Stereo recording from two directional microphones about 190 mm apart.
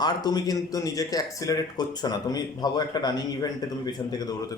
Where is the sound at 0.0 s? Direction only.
20° left (ahead or behind).